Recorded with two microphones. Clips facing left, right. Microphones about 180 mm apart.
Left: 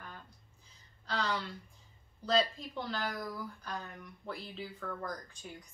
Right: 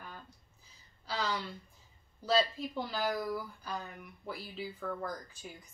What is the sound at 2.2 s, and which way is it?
Speech, 5° right (ahead or behind).